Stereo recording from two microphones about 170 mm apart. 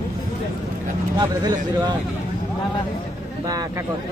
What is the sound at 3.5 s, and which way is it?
Speech, 20° right (ahead or behind).